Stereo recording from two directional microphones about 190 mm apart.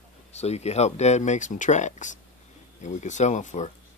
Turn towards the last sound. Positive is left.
turn(degrees=40)  # may be behind; listen again after turning